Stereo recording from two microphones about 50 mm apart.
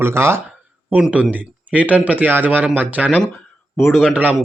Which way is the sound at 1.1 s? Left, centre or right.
Right.